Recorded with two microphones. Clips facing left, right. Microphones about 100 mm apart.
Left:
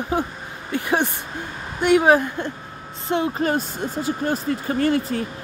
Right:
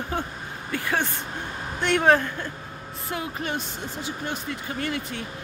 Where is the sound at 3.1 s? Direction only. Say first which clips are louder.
Left 9 dB; 30° left (ahead or behind).